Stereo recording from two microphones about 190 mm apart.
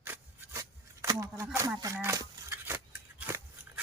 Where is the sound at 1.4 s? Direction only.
10° right (ahead or behind).